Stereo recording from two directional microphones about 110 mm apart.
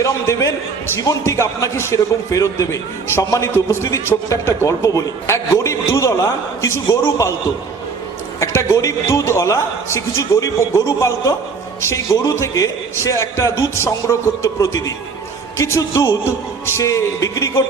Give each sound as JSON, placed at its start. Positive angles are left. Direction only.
{"t": 0.0, "sound": "a man's voice", "side_deg": 25}
{"t": 8.4, "sound": "a man's voice", "side_deg": 25}